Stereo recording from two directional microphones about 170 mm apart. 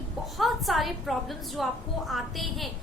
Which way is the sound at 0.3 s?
Centre (ahead or behind).